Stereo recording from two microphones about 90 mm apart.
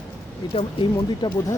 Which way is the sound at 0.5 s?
60° left (ahead or behind).